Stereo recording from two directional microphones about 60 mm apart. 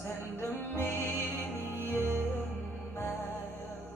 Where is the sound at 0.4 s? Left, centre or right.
Left.